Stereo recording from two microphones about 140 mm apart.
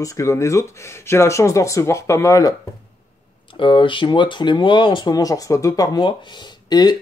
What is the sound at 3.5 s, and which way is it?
Speech, 35° left (ahead or behind).